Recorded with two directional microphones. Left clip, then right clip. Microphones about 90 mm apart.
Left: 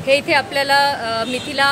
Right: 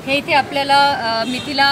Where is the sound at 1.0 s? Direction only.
90° left.